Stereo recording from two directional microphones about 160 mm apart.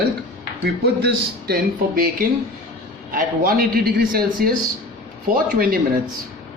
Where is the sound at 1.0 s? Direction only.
75° right (ahead or behind).